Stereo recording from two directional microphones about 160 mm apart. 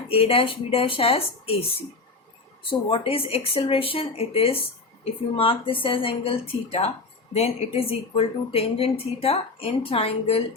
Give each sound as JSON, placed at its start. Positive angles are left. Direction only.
{"t": 0.1, "sound": "speech", "side_deg": 35}